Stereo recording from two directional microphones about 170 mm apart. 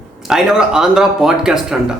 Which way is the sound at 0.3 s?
5° right (ahead or behind).